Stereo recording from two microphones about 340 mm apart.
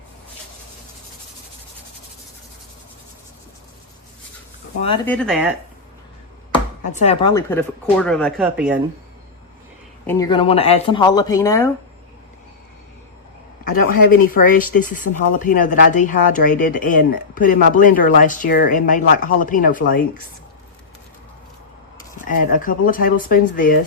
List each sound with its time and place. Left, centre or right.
5.0 s speech: centre
6.8 s speech: centre
10.1 s speech: centre
13.8 s speech: left
22.3 s speech: left